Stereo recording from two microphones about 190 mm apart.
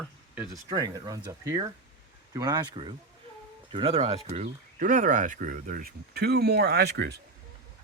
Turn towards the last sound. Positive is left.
turn(degrees=-60)  # may be behind; listen again after turning